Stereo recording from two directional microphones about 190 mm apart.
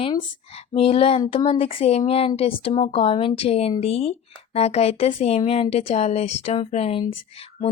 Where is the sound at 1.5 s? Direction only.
30° left (ahead or behind).